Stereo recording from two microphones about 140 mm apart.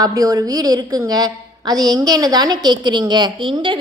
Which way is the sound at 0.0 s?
25° right (ahead or behind).